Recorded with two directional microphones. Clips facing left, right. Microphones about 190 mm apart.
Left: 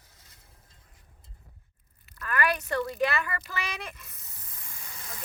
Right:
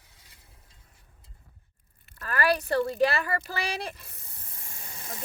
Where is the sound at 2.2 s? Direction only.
35° right (ahead or behind).